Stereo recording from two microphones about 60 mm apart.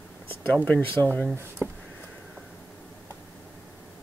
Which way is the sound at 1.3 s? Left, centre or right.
Right.